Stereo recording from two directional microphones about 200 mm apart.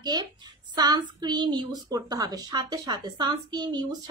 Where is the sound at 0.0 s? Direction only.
20° right (ahead or behind).